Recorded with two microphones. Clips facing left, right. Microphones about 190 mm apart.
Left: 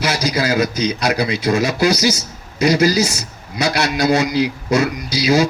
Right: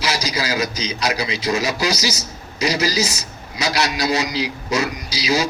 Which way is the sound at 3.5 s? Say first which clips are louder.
Left 3 dB; 55° left (ahead or behind).